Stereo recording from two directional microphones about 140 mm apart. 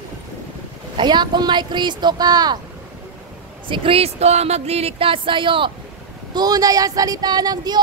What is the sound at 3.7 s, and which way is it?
Speech, 45° right (ahead or behind).